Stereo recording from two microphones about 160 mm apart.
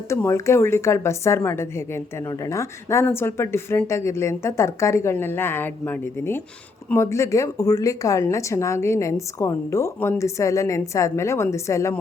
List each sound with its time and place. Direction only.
0.1 s a woman's voice: 15° left (ahead or behind)